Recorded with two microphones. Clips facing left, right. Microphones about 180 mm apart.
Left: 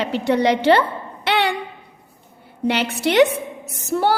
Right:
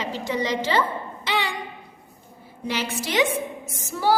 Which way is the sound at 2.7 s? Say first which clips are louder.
Left 8 dB; 65° left (ahead or behind).